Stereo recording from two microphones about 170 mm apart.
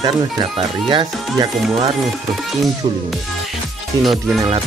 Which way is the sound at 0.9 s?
25° right (ahead or behind).